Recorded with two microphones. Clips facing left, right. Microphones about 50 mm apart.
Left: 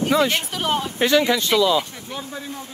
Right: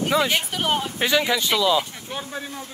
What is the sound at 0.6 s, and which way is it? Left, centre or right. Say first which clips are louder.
Speech: left 2 dB; right.